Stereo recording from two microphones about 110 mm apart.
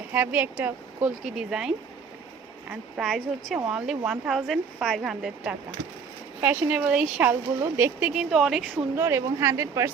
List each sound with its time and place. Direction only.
0.1 s a woman's voice: 15° right (ahead or behind)
6.4 s speech: 15° right (ahead or behind)
9.0 s speech: 25° right (ahead or behind)